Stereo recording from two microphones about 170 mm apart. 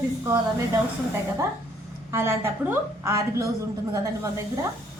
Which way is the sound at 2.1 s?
15° right (ahead or behind).